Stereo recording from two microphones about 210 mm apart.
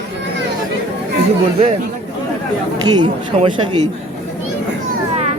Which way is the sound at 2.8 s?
20° right (ahead or behind).